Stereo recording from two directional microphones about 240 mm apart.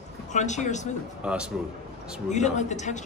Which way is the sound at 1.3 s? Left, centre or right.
Centre.